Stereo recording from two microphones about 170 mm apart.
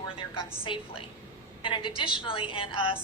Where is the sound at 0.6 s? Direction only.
30° left (ahead or behind).